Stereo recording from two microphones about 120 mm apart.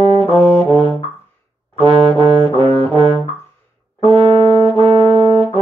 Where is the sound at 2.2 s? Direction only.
55° right (ahead or behind).